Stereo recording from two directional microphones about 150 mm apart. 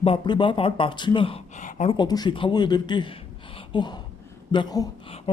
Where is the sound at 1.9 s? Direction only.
30° left (ahead or behind).